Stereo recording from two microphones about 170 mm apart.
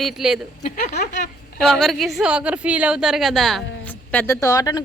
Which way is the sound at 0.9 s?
70° left (ahead or behind).